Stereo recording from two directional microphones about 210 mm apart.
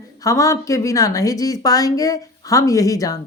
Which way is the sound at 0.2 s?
15° left (ahead or behind).